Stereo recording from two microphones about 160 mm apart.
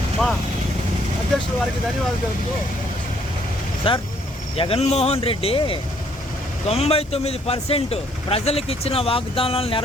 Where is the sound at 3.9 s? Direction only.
35° left (ahead or behind).